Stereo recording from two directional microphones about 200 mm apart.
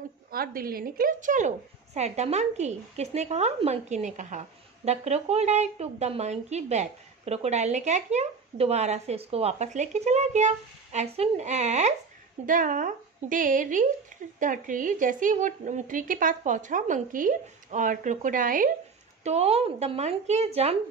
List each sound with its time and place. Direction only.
0.3 s a woman's voice: 45° right (ahead or behind)
19.2 s a woman's voice: 30° right (ahead or behind)